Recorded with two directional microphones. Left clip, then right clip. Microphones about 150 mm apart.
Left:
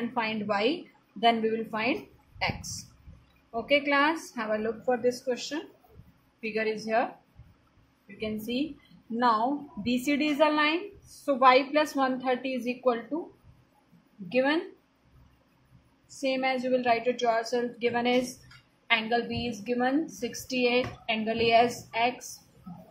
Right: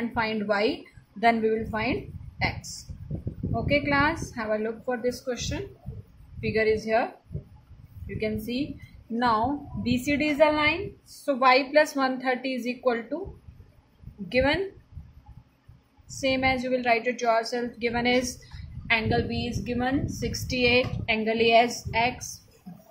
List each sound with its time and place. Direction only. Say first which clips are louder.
0.1 s a woman's voice: right 3 dB; 15° right (ahead or behind)
8.2 s a woman's voice: right 2 dB; 15° right (ahead or behind); by 13.0 s 30° right (ahead or behind)
14.3 s speech: right 2 dB; 35° right (ahead or behind)
16.2 s a woman's voice: right 3 dB; 35° right (ahead or behind)
20.7 s a woman's voice: right 4 dB; 50° right (ahead or behind)
21.3 s a woman's voice: right 2 dB; 25° right (ahead or behind)